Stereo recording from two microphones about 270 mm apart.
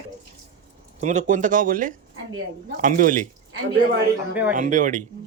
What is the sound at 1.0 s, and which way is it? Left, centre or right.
Speech, right.